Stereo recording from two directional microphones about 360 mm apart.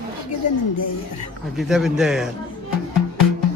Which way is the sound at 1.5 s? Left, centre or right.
Centre.